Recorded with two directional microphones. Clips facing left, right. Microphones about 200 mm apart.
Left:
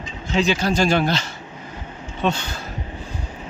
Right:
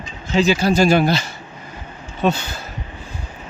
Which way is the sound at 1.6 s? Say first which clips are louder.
Left 2 dB; 10° right (ahead or behind).